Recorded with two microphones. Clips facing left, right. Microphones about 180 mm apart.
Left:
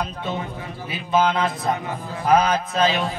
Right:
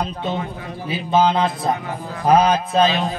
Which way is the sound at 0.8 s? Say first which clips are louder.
Right 3 dB; 30° right (ahead or behind).